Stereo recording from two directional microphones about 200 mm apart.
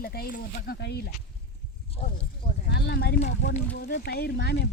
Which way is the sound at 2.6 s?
55° left (ahead or behind).